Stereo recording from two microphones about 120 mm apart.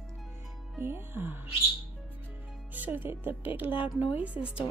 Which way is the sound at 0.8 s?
20° right (ahead or behind).